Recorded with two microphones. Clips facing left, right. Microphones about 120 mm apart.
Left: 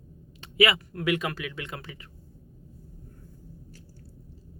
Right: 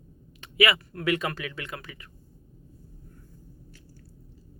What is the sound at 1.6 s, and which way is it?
Speech, 25° left (ahead or behind).